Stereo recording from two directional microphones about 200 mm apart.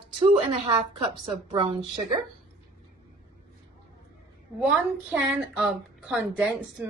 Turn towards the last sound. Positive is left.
turn(degrees=-5)  # may be behind; listen again after turning